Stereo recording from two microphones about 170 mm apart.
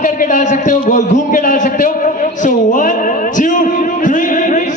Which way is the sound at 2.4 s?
50° left (ahead or behind).